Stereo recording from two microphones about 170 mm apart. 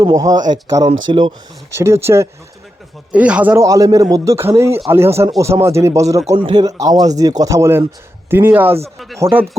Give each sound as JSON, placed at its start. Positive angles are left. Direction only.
{"t": 0.0, "sound": "speech", "side_deg": -20}
{"t": 1.8, "sound": "a man's voice", "side_deg": -15}